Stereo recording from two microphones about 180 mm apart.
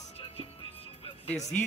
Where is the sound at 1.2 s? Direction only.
40° left (ahead or behind).